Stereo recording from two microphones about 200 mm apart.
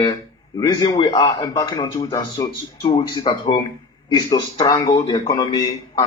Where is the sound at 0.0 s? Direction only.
20° left (ahead or behind).